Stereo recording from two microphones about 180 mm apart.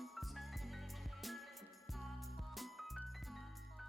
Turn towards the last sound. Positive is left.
turn(degrees=0)  # may be behind; listen again after turning